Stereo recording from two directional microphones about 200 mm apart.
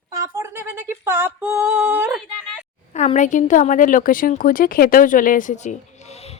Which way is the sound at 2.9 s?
35° left (ahead or behind).